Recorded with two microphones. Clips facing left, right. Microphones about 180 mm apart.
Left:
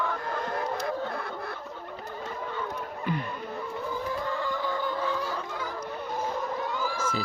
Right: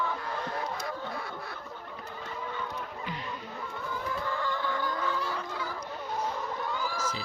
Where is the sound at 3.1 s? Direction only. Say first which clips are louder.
Left 12 dB; 55° left (ahead or behind).